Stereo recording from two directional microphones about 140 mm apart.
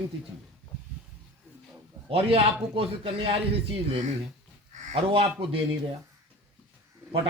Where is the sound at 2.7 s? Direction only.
40° right (ahead or behind).